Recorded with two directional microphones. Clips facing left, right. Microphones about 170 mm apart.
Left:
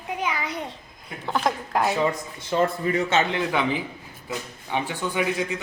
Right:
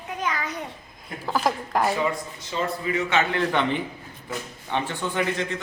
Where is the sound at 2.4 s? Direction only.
55° left (ahead or behind).